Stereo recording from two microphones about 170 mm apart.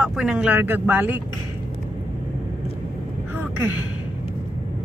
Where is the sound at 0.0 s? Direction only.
5° right (ahead or behind).